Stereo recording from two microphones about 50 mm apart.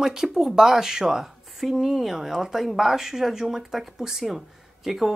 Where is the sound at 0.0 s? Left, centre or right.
Centre.